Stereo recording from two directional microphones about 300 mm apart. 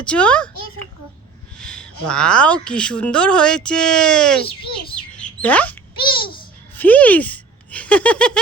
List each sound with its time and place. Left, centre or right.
0.0 s a woman's voice: centre
1.5 s a woman's voice: centre
5.1 s chirp: centre
6.1 s babbling: centre
6.7 s a sound: centre